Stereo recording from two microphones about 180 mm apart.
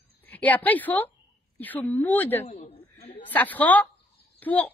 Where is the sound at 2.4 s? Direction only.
40° left (ahead or behind).